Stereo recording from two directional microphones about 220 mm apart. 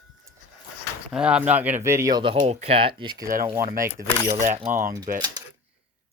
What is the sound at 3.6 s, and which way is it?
Speech, 40° right (ahead or behind).